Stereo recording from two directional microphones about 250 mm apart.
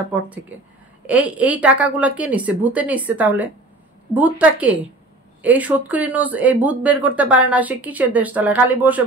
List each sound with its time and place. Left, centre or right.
0.1 s a woman's voice: centre